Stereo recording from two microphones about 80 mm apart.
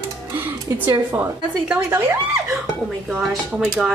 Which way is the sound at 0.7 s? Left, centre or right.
Right.